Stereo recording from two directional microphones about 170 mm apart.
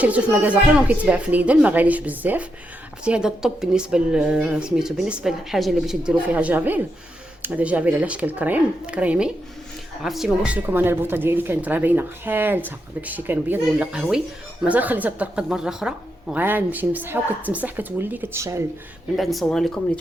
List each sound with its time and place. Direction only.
0.0 s a woman's voice: 10° right (ahead or behind)
19.1 s a woman's voice: centre (ahead or behind)